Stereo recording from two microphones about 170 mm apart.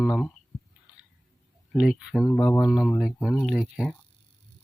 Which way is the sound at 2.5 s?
15° left (ahead or behind).